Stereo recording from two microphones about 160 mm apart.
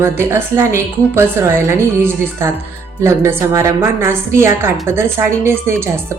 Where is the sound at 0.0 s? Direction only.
15° right (ahead or behind).